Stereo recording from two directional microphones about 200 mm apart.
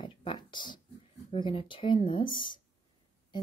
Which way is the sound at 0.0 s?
25° left (ahead or behind).